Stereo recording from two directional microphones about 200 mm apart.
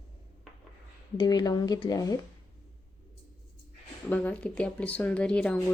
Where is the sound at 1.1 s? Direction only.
20° left (ahead or behind).